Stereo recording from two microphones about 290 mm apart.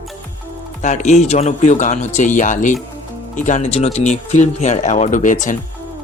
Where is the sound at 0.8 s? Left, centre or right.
Left.